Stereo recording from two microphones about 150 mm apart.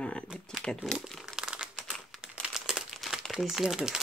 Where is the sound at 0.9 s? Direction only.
Centre (ahead or behind).